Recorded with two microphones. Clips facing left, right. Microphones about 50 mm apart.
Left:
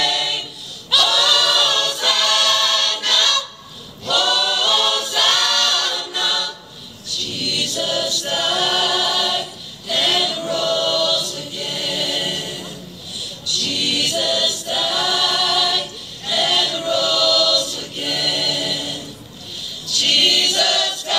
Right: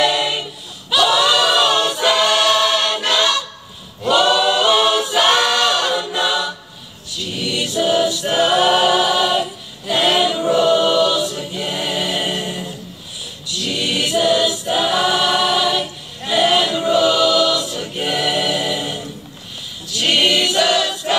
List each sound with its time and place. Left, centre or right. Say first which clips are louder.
0.0 s choir: right 4 dB; right